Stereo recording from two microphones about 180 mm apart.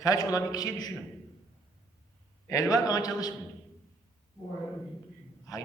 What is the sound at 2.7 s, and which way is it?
Speech, 20° left (ahead or behind).